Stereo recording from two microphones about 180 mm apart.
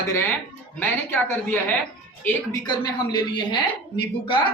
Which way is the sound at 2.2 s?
20° left (ahead or behind).